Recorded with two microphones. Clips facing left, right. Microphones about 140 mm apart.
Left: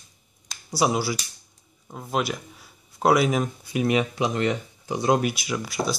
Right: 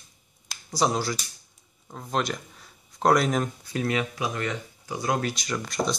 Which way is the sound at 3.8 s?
20° left (ahead or behind).